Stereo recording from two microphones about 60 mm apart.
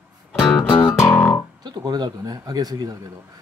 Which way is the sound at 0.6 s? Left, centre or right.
Left.